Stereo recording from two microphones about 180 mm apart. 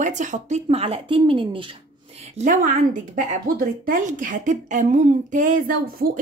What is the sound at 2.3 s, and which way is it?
Speech, 45° right (ahead or behind).